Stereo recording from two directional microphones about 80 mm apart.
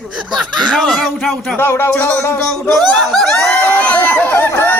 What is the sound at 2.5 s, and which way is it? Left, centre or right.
Speech, centre.